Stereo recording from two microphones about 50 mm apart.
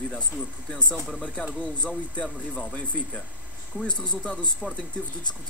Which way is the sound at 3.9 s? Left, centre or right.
Left.